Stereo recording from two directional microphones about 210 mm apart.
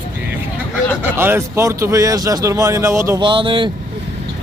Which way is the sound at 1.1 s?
10° right (ahead or behind).